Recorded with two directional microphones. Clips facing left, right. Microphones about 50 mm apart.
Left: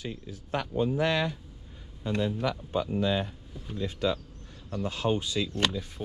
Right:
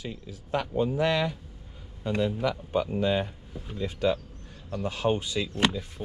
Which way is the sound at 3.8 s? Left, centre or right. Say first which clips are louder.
Right 3 dB; right.